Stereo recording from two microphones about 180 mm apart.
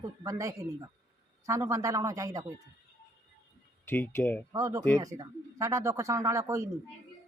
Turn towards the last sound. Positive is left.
turn(degrees=-15)  # may be behind; listen again after turning